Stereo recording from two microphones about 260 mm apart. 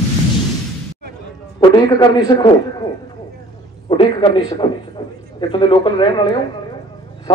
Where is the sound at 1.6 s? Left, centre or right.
Centre.